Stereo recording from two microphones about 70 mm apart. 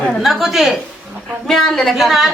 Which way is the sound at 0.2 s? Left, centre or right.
Centre.